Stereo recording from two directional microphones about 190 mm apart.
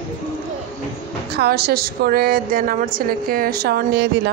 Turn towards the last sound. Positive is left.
turn(degrees=-55)  # may be behind; listen again after turning